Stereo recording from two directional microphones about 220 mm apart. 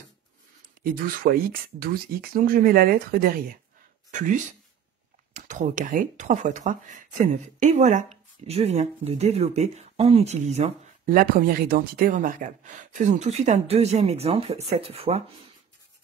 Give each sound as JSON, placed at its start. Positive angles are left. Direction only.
{"t": 0.8, "sound": "speech", "side_deg": -40}
{"t": 5.3, "sound": "speech", "side_deg": -35}